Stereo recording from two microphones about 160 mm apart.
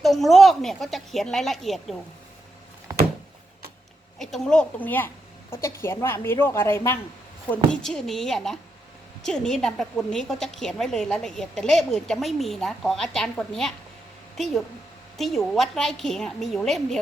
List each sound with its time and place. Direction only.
0.0 s a woman's voice: centre (ahead or behind)
4.2 s a woman's voice: centre (ahead or behind)
7.5 s a woman's voice: 5° left (ahead or behind)